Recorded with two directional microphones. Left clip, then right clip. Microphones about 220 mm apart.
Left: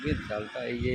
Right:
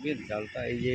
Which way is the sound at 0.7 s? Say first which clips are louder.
Right 1 dB; 45° left (ahead or behind).